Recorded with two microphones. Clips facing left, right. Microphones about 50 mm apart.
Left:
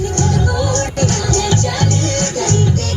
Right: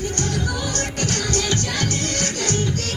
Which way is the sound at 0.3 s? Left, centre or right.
Left.